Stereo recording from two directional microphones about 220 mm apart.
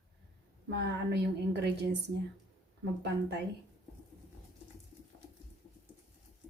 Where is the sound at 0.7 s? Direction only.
50° right (ahead or behind).